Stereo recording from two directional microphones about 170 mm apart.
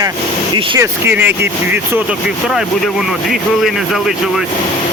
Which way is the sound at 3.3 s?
Centre (ahead or behind).